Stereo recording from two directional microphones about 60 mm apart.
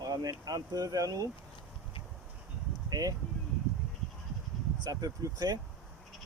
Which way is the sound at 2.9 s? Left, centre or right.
Right.